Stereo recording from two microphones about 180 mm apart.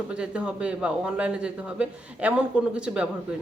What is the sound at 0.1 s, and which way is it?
Speech, 5° right (ahead or behind).